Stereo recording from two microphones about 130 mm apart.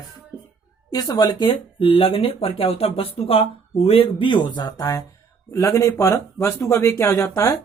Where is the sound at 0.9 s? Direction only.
30° left (ahead or behind).